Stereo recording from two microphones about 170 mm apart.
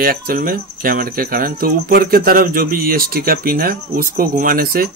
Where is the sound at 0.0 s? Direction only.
60° right (ahead or behind).